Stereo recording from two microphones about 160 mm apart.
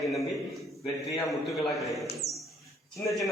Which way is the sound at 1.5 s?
Centre (ahead or behind).